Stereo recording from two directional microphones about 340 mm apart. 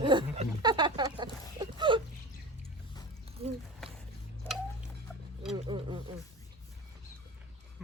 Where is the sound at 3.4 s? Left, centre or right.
Centre.